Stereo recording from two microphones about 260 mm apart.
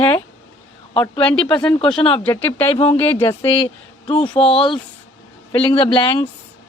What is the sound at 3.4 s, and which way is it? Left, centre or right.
Speech, centre.